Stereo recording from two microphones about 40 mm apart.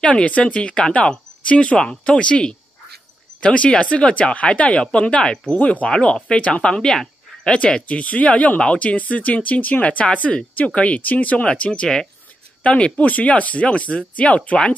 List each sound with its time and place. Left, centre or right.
0.0 s speech: left
6.8 s speech: centre
7.8 s speech: left
11.0 s speech: left
11.4 s speech: left